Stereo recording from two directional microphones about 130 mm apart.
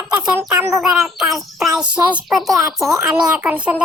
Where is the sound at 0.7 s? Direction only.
5° right (ahead or behind).